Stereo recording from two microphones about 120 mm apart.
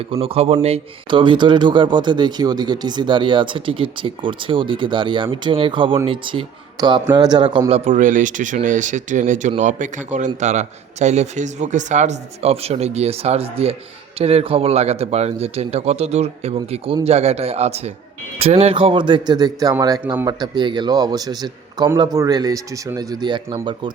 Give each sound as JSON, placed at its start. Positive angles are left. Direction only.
{"t": 0.0, "sound": "speech", "side_deg": -50}
{"t": 1.1, "sound": "speech", "side_deg": -40}
{"t": 6.7, "sound": "a man's voice", "side_deg": -35}
{"t": 7.7, "sound": "a man's voice", "side_deg": -80}